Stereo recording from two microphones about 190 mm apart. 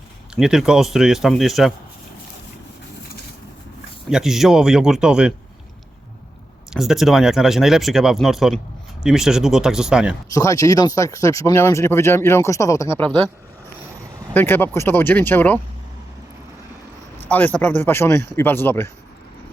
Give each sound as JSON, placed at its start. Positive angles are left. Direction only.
{"t": 0.3, "sound": "speech", "side_deg": -5}
{"t": 4.1, "sound": "speech", "side_deg": 0}
{"t": 6.7, "sound": "speech", "side_deg": 0}
{"t": 10.3, "sound": "speech", "side_deg": 15}
{"t": 14.3, "sound": "speech", "side_deg": 10}
{"t": 17.2, "sound": "speech", "side_deg": 10}